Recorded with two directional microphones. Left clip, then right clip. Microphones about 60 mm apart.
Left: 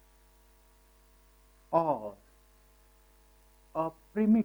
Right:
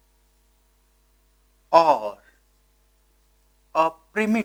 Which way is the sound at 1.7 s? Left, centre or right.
Right.